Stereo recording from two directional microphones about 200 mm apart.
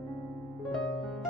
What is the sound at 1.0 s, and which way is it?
Piano, centre (ahead or behind).